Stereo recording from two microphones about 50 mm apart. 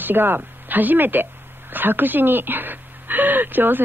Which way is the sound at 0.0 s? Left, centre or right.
Right.